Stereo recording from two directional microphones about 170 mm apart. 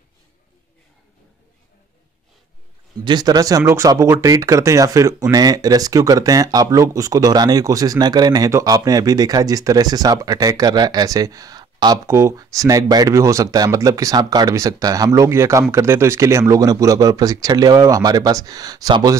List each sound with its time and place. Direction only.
3.1 s speech: 25° right (ahead or behind)